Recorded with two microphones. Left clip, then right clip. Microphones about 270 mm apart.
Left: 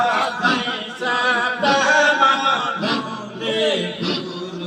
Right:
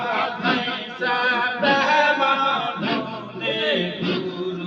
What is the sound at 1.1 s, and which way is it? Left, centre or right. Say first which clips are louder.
Chant: left 3 dB; left.